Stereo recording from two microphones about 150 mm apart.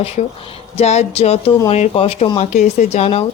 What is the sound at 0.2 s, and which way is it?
Speech, 45° left (ahead or behind).